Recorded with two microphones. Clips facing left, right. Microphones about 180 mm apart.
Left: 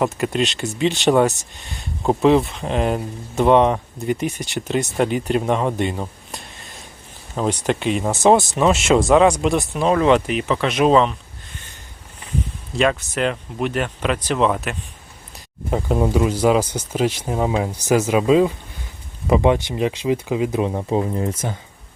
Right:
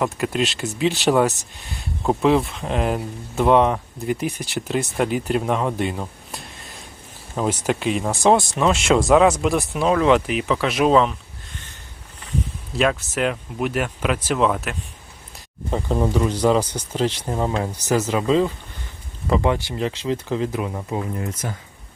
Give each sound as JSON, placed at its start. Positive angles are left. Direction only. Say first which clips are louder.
{"t": 0.0, "sound": "speech", "louder": "left 2 dB", "side_deg": 0}
{"t": 12.7, "sound": "speech", "louder": "left 1 dB", "side_deg": -5}
{"t": 15.7, "sound": "speech", "louder": "left 2 dB", "side_deg": 10}
{"t": 20.6, "sound": "speech", "louder": "left 6 dB", "side_deg": 25}